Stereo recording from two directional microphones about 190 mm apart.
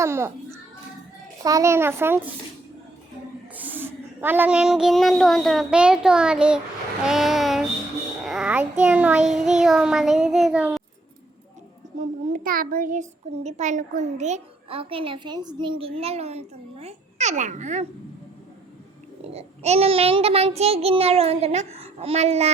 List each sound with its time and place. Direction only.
0.0 s a child's voice: 15° right (ahead or behind)
3.5 s speech: 10° right (ahead or behind)
7.0 s child singing: centre (ahead or behind)
11.9 s a child's voice: 45° right (ahead or behind)
19.2 s a child's voice: 35° right (ahead or behind)